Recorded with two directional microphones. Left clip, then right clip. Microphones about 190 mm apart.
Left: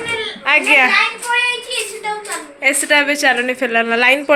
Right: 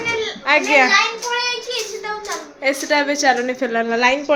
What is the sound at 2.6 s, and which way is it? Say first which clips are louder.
A woman's voice: left 4 dB; 5° right (ahead or behind).